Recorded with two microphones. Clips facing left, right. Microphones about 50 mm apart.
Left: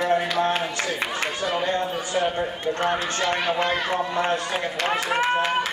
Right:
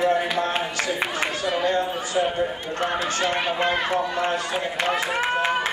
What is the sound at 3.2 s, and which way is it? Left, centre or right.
Speech, right.